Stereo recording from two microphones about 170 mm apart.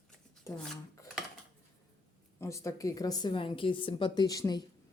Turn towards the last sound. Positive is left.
turn(degrees=20)  # may be behind; listen again after turning